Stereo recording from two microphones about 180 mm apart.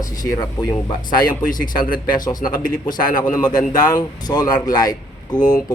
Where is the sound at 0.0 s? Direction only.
20° left (ahead or behind).